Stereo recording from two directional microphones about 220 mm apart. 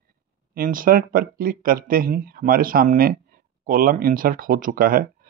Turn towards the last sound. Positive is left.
turn(degrees=-40)  # may be behind; listen again after turning